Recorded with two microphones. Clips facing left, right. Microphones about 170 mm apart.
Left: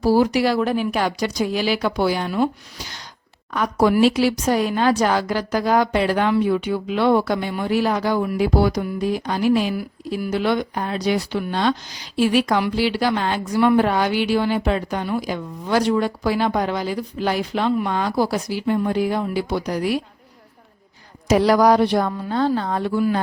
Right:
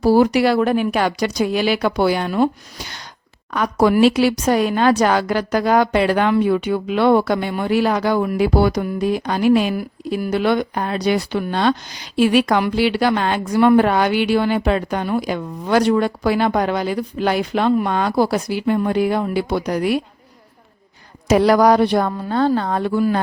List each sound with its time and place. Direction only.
0.0 s speech: 60° right (ahead or behind)
3.5 s speech: 75° right (ahead or behind)
21.2 s speech: 60° right (ahead or behind)